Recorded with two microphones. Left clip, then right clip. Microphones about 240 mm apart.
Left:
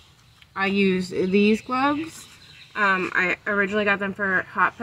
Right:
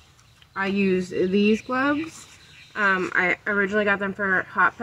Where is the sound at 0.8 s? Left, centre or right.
Left.